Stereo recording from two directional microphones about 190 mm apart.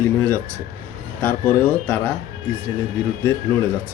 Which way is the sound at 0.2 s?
10° left (ahead or behind).